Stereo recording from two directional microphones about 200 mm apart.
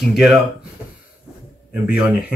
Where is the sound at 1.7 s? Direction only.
5° right (ahead or behind).